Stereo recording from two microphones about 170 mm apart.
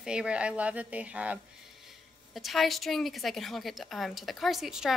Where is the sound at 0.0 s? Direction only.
5° right (ahead or behind).